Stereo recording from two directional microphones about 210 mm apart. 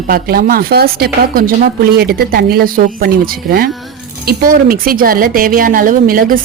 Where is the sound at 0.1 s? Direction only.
45° right (ahead or behind).